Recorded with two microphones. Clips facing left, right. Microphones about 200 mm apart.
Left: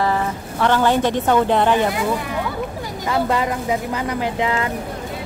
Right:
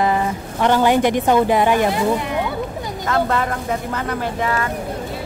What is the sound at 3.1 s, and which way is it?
Speech, 15° left (ahead or behind).